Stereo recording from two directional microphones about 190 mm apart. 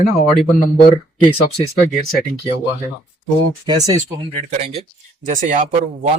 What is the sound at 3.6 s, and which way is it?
Speech, 20° right (ahead or behind).